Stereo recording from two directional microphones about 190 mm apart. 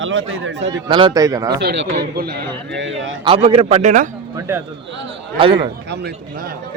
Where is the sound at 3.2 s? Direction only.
30° right (ahead or behind).